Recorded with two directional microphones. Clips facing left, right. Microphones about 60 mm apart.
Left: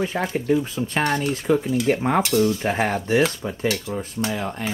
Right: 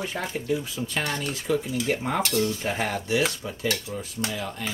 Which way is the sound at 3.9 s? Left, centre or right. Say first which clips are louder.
Left 6 dB; left.